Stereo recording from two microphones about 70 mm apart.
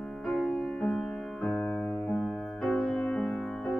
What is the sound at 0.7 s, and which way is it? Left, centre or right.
Music, centre.